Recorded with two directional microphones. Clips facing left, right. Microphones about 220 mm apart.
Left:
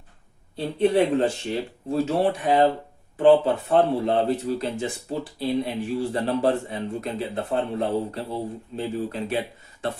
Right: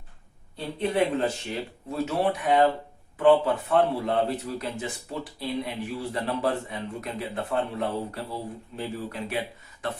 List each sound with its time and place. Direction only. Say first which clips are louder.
0.5 s a man's voice: left 7 dB; 30° left (ahead or behind)